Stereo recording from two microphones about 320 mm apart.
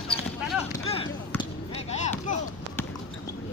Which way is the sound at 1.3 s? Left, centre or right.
Centre.